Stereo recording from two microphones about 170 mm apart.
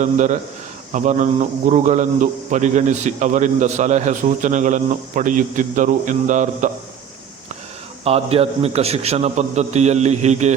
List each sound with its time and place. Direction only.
0.0 s a man's voice: 45° right (ahead or behind)
8.0 s a man's voice: 35° right (ahead or behind)